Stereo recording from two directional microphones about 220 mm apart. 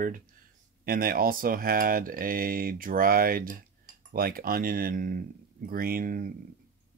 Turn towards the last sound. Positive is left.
turn(degrees=-40)  # may be behind; listen again after turning